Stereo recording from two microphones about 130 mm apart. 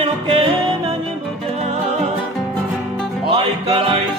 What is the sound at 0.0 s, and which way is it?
Music, 45° right (ahead or behind).